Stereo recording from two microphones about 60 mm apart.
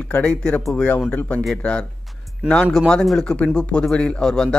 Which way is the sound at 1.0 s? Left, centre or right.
Left.